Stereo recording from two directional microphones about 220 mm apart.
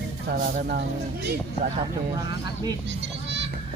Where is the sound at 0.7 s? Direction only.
50° right (ahead or behind).